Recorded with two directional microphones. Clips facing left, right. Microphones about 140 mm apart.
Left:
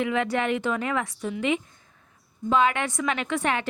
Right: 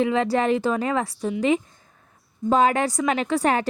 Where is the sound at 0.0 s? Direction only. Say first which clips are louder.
Right 4 dB; 35° right (ahead or behind).